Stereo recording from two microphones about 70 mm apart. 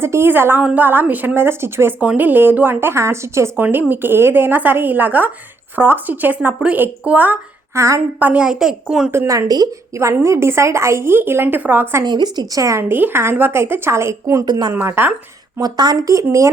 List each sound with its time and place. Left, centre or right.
0.0 s a woman's voice: right
2.0 s a woman's voice: right
3.5 s a woman's voice: right
7.8 s speech: right
8.2 s a child's voice: centre
9.1 s a woman's voice: right
12.0 s speech: right
12.9 s a woman's voice: right
14.4 s a woman's voice: right
14.7 s a woman's voice: right
15.6 s a woman's voice: right